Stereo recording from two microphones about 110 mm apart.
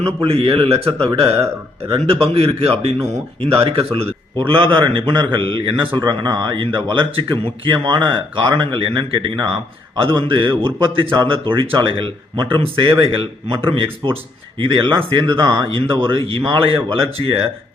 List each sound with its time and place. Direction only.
0.2 s speech: 55° right (ahead or behind)
4.4 s a man's voice: 50° right (ahead or behind)
15.8 s a man's voice: 50° right (ahead or behind)